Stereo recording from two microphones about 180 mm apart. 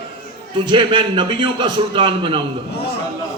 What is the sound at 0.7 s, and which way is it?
A man's voice, 25° right (ahead or behind).